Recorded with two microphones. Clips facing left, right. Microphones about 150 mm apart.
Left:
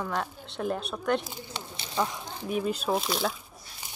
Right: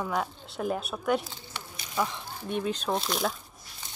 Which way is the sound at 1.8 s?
30° left (ahead or behind).